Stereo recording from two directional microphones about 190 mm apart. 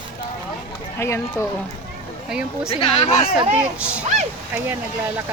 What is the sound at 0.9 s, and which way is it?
Speech, 15° left (ahead or behind).